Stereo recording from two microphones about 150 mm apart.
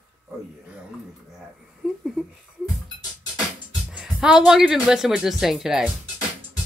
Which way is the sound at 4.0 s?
5° right (ahead or behind).